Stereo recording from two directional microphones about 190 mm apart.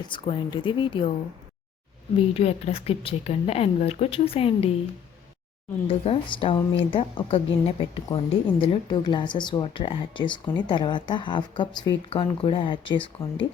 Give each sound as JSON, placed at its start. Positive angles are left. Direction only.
{"t": 0.1, "sound": "a woman's voice", "side_deg": 25}
{"t": 2.1, "sound": "a woman's voice", "side_deg": 30}
{"t": 5.9, "sound": "a woman's voice", "side_deg": 30}